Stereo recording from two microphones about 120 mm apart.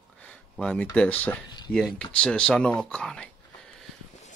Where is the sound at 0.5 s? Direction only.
10° left (ahead or behind).